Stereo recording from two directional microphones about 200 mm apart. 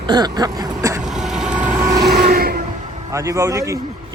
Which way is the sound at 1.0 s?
Centre (ahead or behind).